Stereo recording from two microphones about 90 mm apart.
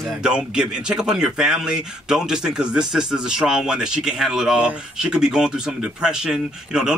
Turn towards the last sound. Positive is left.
turn(degrees=-5)  # may be behind; listen again after turning